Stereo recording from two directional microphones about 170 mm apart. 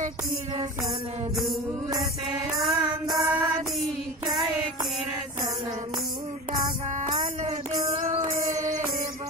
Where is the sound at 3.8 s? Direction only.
Centre (ahead or behind).